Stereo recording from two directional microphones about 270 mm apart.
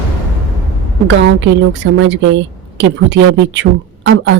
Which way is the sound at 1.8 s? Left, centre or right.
Right.